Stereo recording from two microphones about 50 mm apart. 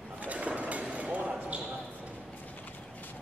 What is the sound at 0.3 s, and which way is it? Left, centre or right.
Basketball bounce, right.